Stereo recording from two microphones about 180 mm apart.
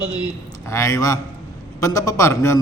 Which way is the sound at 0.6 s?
15° left (ahead or behind).